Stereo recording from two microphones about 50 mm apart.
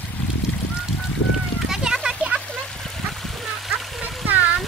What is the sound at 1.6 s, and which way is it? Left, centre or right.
Children playing, centre.